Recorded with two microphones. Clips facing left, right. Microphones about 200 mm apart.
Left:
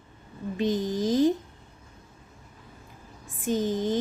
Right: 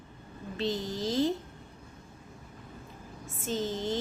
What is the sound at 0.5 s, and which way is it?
Child singing, 15° left (ahead or behind).